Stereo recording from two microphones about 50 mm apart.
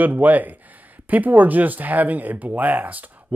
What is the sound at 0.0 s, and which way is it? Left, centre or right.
Speech, right.